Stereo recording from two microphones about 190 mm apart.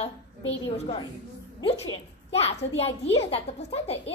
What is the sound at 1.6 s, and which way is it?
A child's voice, 30° left (ahead or behind).